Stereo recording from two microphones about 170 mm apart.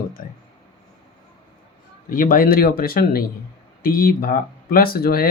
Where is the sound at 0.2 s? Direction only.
55° left (ahead or behind).